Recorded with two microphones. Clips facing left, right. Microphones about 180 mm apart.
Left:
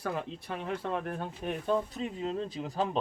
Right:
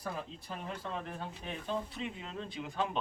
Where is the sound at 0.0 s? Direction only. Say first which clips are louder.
Left 6 dB; 70° left (ahead or behind).